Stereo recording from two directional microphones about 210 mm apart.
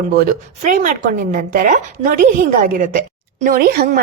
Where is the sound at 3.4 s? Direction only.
45° right (ahead or behind).